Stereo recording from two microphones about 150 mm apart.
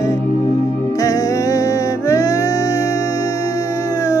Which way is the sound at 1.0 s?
20° left (ahead or behind).